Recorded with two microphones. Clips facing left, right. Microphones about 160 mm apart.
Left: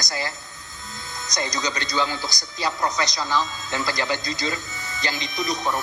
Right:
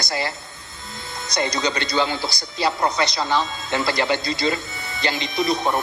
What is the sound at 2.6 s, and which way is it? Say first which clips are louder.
Speech: right 4 dB; 65° right (ahead or behind).